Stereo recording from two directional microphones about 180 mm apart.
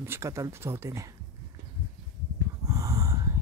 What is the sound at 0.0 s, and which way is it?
Speech, 15° right (ahead or behind).